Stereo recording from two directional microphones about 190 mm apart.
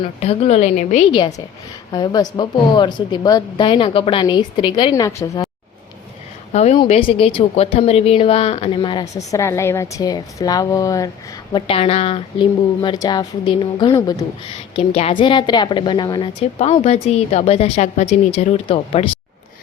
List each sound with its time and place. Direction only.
0.0 s speech: 35° left (ahead or behind)
1.9 s a woman's voice: 20° left (ahead or behind)
6.5 s a woman's voice: 35° left (ahead or behind); by 11.1 s 20° left (ahead or behind)
11.5 s a woman's voice: 30° left (ahead or behind)